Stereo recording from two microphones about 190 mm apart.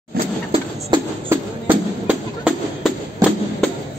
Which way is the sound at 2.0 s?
5° right (ahead or behind).